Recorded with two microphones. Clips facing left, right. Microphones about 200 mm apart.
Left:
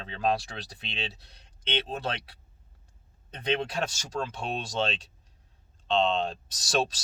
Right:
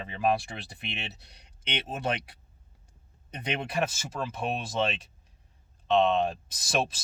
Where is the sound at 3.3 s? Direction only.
15° right (ahead or behind).